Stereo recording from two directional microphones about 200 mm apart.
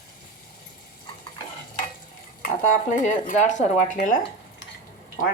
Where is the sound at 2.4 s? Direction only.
40° left (ahead or behind).